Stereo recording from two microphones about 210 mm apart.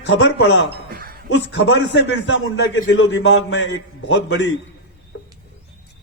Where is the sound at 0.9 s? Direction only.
45° right (ahead or behind).